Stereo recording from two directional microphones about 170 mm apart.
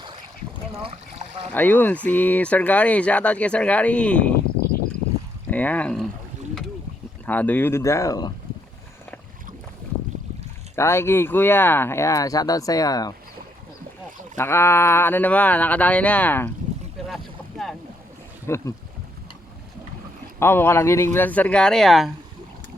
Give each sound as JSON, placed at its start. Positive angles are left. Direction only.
{"t": 0.7, "sound": "speech", "side_deg": -35}
{"t": 1.5, "sound": "speech", "side_deg": 10}
{"t": 5.5, "sound": "speech", "side_deg": 10}
{"t": 7.3, "sound": "speech", "side_deg": 10}
{"t": 10.8, "sound": "speech", "side_deg": 15}
{"t": 14.3, "sound": "speech", "side_deg": 15}
{"t": 17.0, "sound": "boat", "side_deg": 0}
{"t": 18.4, "sound": "speech", "side_deg": 15}
{"t": 20.4, "sound": "speech", "side_deg": 15}